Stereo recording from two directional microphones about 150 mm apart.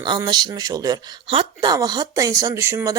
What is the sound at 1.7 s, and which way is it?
Speech, 25° right (ahead or behind).